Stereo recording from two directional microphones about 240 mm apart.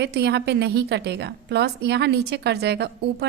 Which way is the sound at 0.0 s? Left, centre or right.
Right.